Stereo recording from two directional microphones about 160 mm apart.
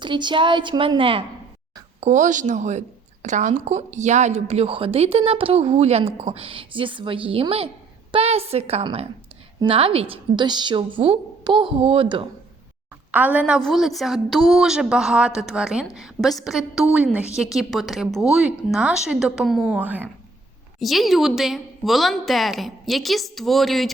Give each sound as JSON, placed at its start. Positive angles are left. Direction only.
{"t": 0.0, "sound": "a woman's voice", "side_deg": -30}
{"t": 2.0, "sound": "a woman's voice", "side_deg": -50}
{"t": 13.1, "sound": "a woman's voice", "side_deg": -10}